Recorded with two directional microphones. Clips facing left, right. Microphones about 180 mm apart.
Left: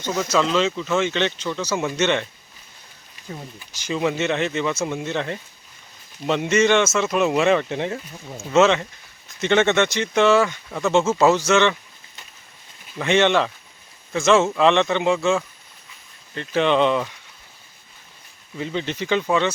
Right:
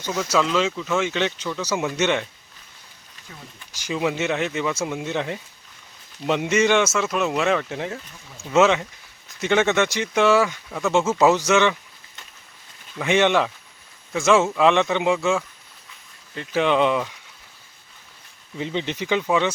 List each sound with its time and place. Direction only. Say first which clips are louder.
0.5 s speech: left 1 dB; 5° right (ahead or behind)
3.3 s speech: left 9 dB; 35° left (ahead or behind)
3.8 s speech: left 1 dB; 10° right (ahead or behind)
11.2 s speech: right 1 dB; 15° right (ahead or behind)
13.0 s speech: left 1 dB; 10° right (ahead or behind)
18.5 s speech: even; 20° right (ahead or behind)